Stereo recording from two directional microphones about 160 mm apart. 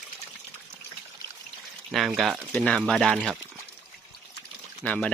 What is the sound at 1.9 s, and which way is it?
Speech, centre (ahead or behind).